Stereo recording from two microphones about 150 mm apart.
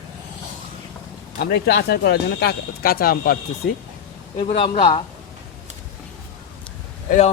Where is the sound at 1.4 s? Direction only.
90° left.